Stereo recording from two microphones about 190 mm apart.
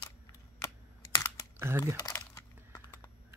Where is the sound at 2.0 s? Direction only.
15° left (ahead or behind).